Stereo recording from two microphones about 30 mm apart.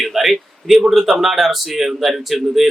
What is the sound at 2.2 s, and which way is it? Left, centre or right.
Speech, centre.